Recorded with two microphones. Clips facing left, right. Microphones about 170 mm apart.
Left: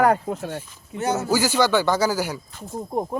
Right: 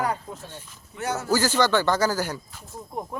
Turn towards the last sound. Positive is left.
turn(degrees=35)  # may be behind; listen again after turning